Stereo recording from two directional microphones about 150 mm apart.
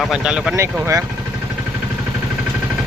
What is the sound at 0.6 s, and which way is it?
Speech, 20° right (ahead or behind).